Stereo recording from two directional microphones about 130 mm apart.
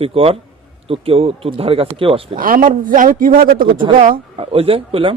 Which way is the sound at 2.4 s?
90° right.